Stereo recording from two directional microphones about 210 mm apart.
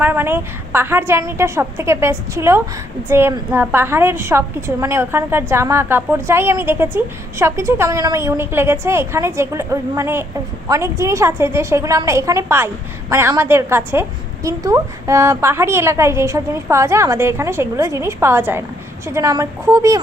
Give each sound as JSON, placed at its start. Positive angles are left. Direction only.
{"t": 0.0, "sound": "a woman's voice", "side_deg": -10}